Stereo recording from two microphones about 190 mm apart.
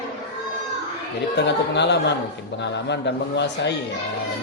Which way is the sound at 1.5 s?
65° left (ahead or behind).